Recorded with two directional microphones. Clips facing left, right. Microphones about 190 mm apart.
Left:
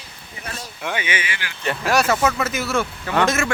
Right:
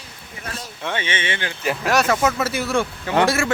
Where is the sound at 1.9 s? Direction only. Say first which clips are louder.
Even; 10° left (ahead or behind).